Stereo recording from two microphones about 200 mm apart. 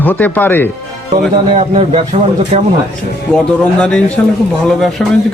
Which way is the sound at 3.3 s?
5° left (ahead or behind).